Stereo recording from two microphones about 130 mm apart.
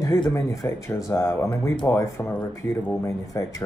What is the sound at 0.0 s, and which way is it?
Speech, 25° left (ahead or behind).